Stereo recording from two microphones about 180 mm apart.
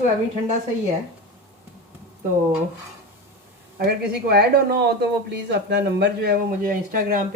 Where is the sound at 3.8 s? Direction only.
60° right (ahead or behind).